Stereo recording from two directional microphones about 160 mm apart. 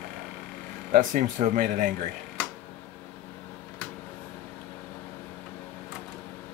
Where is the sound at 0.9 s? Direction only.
55° right (ahead or behind).